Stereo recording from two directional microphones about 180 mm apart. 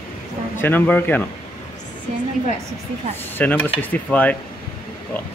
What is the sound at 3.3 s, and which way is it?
Speech, 10° left (ahead or behind).